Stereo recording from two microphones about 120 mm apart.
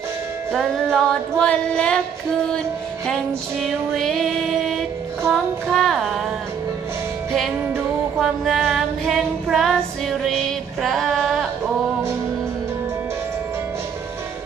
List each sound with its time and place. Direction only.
0.5 s music: 5° left (ahead or behind)
3.6 s music: 5° left (ahead or behind)
7.6 s music: 20° right (ahead or behind)
8.2 s female singing: centre (ahead or behind)